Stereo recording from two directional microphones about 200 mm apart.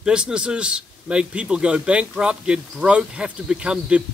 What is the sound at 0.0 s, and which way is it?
A man's voice, 5° right (ahead or behind).